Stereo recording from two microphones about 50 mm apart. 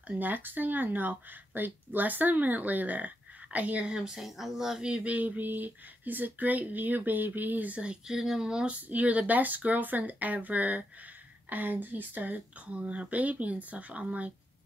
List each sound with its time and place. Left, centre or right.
0.2 s speech: right
3.9 s speech: centre
4.8 s speech: right
5.1 s speech: right
7.8 s speech: centre
8.9 s speech: right